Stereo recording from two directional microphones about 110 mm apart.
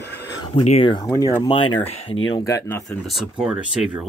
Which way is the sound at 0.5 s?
80° left.